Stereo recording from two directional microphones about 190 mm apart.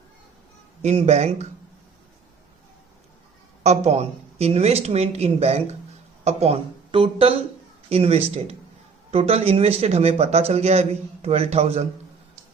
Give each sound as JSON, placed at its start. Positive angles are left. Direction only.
{"t": 0.8, "sound": "a man's voice", "side_deg": -35}
{"t": 3.6, "sound": "a man's voice", "side_deg": -35}